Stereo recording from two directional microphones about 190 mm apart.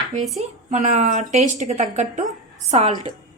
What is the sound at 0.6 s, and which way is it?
A woman's voice, 40° right (ahead or behind).